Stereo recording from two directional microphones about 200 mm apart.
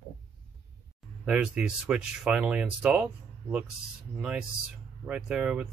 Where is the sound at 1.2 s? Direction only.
5° right (ahead or behind).